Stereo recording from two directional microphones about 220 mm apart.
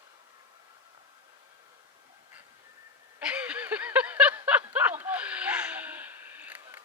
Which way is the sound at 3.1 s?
5° right (ahead or behind).